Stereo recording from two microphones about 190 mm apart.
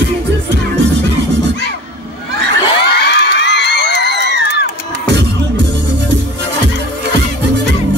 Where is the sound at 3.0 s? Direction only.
60° left (ahead or behind).